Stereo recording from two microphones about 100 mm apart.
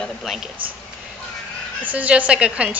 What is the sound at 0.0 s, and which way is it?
Speech, centre (ahead or behind).